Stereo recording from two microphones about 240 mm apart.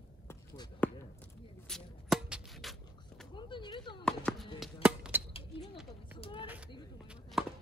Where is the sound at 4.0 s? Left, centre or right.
Centre.